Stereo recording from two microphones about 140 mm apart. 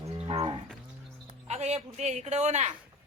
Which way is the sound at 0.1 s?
45° right (ahead or behind).